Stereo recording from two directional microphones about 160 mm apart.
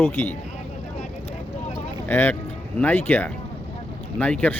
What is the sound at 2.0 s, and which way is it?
Speech, 10° left (ahead or behind).